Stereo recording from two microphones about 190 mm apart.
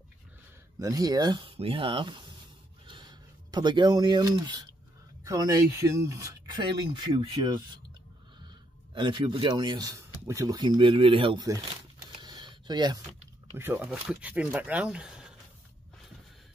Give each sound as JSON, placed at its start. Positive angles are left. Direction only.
{"t": 0.7, "sound": "speech", "side_deg": -20}
{"t": 8.9, "sound": "speech", "side_deg": -25}
{"t": 12.2, "sound": "a sound", "side_deg": -25}
{"t": 13.6, "sound": "speech", "side_deg": -10}